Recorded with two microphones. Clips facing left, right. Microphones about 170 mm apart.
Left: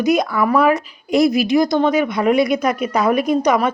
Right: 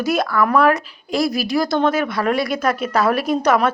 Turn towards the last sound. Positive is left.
turn(degrees=15)  # may be behind; listen again after turning